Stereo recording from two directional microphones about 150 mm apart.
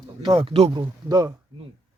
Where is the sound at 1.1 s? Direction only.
25° right (ahead or behind).